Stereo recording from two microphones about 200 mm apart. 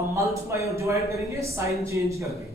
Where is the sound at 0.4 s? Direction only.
15° right (ahead or behind).